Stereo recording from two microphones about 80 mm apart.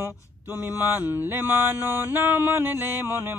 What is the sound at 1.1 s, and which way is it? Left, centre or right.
Mantra, right.